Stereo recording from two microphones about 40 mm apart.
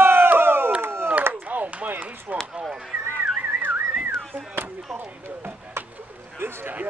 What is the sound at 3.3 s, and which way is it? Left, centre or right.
Whistling, right.